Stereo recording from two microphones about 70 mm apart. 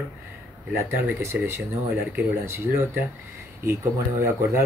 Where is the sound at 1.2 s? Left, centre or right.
Right.